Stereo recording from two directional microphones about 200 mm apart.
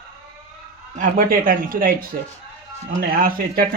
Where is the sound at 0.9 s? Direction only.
45° right (ahead or behind).